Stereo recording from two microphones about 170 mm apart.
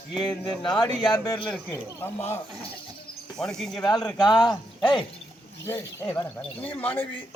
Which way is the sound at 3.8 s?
25° left (ahead or behind).